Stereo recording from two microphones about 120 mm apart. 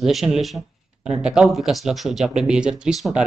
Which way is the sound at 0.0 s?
Centre (ahead or behind).